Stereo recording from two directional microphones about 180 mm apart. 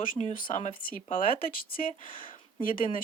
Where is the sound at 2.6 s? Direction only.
50° left (ahead or behind).